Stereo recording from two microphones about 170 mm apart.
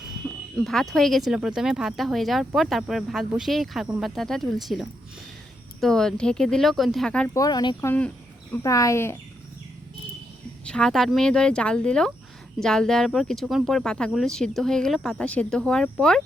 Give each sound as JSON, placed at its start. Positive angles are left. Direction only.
{"t": 0.5, "sound": "speech", "side_deg": 0}
{"t": 7.3, "sound": "speech", "side_deg": 25}
{"t": 7.9, "sound": "speech", "side_deg": 10}
{"t": 8.5, "sound": "speech", "side_deg": 20}
{"t": 10.7, "sound": "speech", "side_deg": 5}